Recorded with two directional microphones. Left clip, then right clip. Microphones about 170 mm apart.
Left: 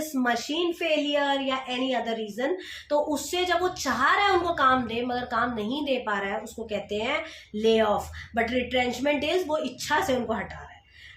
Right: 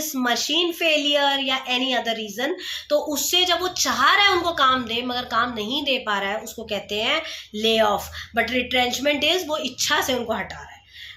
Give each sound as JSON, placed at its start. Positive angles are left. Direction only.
{"t": 0.2, "sound": "a woman's voice", "side_deg": -10}